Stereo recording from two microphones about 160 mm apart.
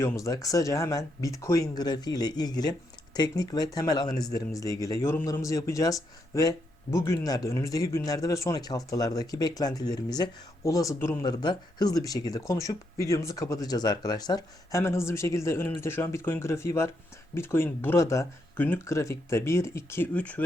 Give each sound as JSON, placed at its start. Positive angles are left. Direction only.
{"t": 0.0, "sound": "speech", "side_deg": 20}